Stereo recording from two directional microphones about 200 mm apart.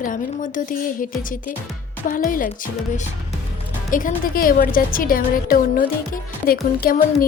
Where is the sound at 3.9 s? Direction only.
40° left (ahead or behind).